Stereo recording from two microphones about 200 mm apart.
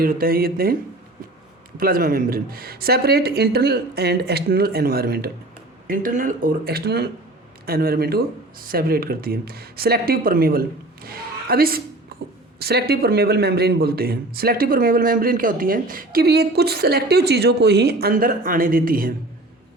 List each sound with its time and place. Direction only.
0.0 s a man's voice: 45° right (ahead or behind)
1.8 s a man's voice: 45° right (ahead or behind)